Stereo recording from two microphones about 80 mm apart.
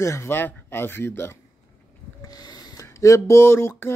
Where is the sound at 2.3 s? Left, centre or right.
Left.